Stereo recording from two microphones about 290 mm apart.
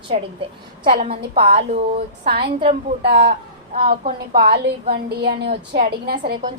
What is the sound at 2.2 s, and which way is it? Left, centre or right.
A woman's voice, right.